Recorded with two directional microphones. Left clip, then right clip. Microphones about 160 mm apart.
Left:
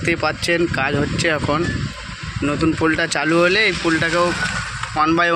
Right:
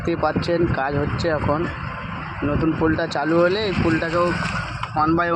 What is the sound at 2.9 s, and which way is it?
A man's voice, 10° left (ahead or behind).